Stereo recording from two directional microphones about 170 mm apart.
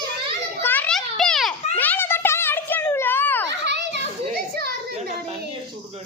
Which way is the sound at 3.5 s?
90° right.